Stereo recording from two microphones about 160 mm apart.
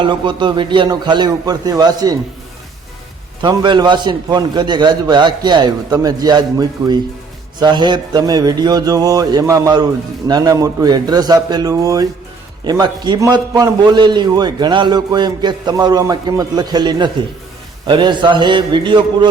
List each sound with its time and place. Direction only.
0.0 s a man's voice: 30° right (ahead or behind)
3.4 s a man's voice: 25° right (ahead or behind)